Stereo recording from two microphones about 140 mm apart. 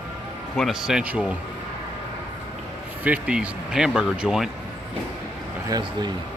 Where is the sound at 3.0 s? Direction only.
10° right (ahead or behind).